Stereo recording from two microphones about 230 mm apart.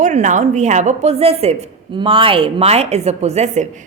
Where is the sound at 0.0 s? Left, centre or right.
Right.